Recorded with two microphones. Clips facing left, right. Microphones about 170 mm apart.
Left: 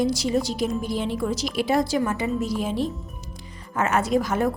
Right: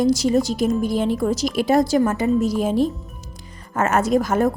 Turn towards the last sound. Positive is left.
turn(degrees=-45)  # may be behind; listen again after turning